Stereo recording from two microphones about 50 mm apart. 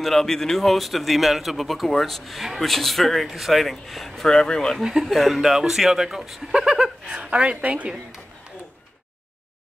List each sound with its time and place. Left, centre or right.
0.0 s a man's voice: centre
4.8 s a woman's voice: centre; by 8.0 s right